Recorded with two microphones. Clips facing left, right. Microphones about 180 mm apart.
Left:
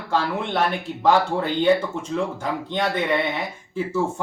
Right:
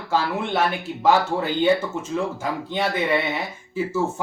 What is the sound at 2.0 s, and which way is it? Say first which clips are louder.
Speech: even; 5° right (ahead or behind).